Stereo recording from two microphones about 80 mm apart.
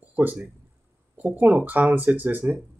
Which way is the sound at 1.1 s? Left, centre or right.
Right.